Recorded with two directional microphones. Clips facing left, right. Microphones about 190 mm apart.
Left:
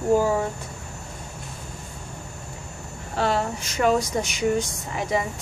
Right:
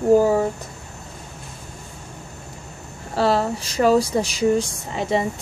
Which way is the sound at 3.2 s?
35° right (ahead or behind).